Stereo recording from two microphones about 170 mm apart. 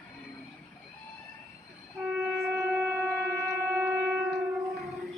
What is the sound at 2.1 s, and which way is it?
Shofar, 10° right (ahead or behind).